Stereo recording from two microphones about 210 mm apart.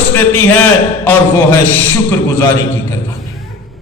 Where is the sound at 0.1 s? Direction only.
10° left (ahead or behind).